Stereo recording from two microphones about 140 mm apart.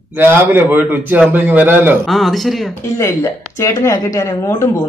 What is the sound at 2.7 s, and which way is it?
Speech, 20° left (ahead or behind).